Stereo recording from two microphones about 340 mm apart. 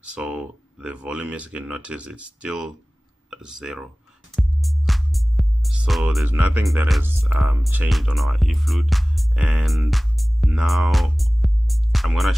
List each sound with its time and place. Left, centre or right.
0.0 s speech: centre
4.4 s music: centre